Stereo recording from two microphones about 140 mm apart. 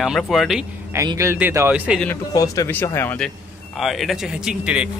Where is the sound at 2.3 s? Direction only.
25° left (ahead or behind).